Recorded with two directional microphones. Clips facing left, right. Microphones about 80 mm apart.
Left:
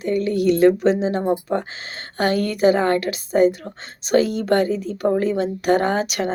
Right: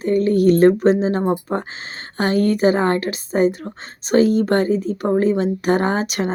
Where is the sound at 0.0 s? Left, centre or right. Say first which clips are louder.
Right 4 dB; right.